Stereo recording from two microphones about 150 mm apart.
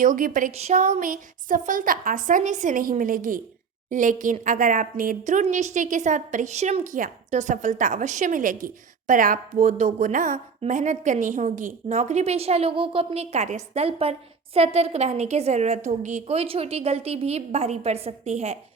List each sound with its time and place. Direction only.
0.0 s a woman's voice: 65° right (ahead or behind)
0.5 s a woman's voice: 50° right (ahead or behind)